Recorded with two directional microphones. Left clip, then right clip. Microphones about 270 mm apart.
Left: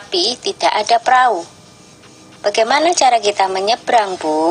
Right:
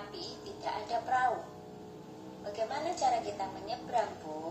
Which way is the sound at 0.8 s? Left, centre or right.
Left.